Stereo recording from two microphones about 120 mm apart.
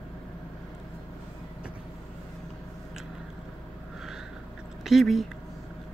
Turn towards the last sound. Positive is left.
turn(degrees=0)  # may be behind; listen again after turning